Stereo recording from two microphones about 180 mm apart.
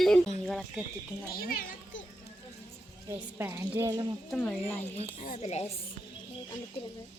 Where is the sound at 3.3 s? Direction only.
15° right (ahead or behind).